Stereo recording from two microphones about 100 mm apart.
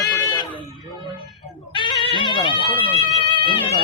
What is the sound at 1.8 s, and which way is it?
Music, 60° left (ahead or behind).